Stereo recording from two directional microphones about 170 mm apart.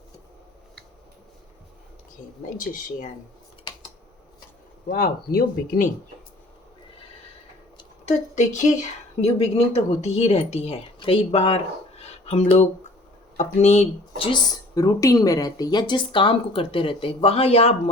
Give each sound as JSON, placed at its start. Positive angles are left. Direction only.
{"t": 2.2, "sound": "speech", "side_deg": 25}
{"t": 2.6, "sound": "speech", "side_deg": 50}
{"t": 4.9, "sound": "speech", "side_deg": 60}
{"t": 8.0, "sound": "a woman's voice", "side_deg": 45}
{"t": 9.7, "sound": "a woman's voice", "side_deg": 40}